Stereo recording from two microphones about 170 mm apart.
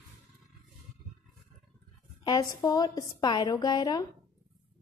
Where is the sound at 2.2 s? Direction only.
25° left (ahead or behind).